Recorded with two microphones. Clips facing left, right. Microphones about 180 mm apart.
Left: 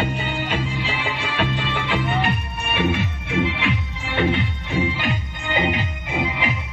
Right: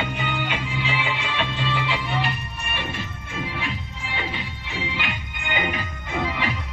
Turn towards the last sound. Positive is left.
turn(degrees=15)  # may be behind; listen again after turning